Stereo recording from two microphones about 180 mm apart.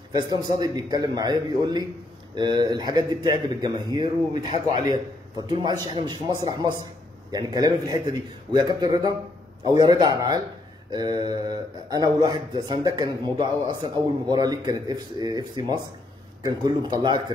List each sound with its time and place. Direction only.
0.1 s speech: 20° right (ahead or behind)